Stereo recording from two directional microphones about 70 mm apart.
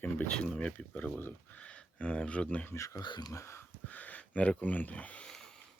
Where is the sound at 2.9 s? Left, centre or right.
Left.